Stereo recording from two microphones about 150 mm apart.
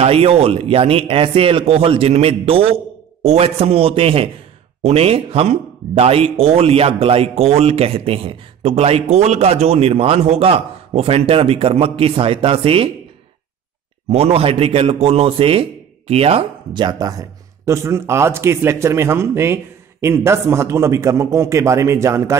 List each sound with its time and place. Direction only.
0.0 s speech: 45° right (ahead or behind)
14.0 s speech: 40° right (ahead or behind); by 22.4 s 20° right (ahead or behind)